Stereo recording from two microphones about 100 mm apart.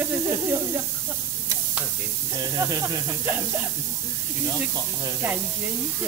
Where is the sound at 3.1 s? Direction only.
25° right (ahead or behind).